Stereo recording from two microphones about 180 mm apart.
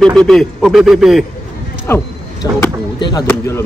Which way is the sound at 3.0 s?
25° left (ahead or behind).